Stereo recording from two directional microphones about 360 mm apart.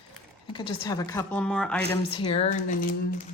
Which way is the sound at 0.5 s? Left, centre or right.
Centre.